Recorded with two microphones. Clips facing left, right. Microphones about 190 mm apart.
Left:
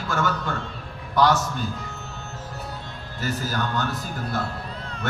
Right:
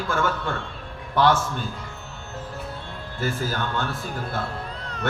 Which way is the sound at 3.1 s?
40° left (ahead or behind).